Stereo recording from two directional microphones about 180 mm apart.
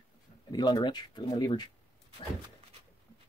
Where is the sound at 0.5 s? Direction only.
25° left (ahead or behind).